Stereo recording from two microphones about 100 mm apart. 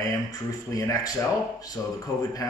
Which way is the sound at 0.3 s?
35° left (ahead or behind).